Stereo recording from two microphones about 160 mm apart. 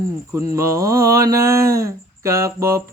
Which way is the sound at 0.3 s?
20° right (ahead or behind).